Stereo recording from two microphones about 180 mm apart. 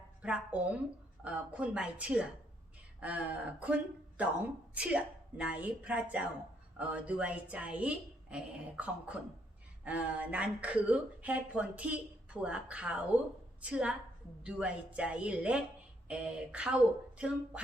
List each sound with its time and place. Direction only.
0.2 s a woman's voice: 5° right (ahead or behind)